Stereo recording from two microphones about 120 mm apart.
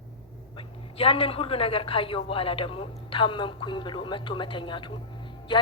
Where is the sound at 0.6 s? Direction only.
50° left (ahead or behind).